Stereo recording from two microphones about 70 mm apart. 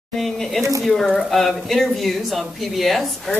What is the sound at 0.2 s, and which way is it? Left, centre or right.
Speech, centre.